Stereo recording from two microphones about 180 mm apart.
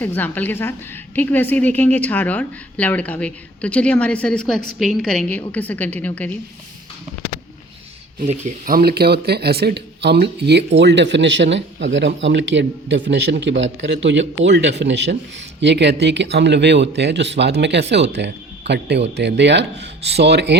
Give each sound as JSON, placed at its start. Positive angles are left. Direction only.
{"t": 0.0, "sound": "a woman's voice", "side_deg": 10}
{"t": 8.3, "sound": "speech", "side_deg": -45}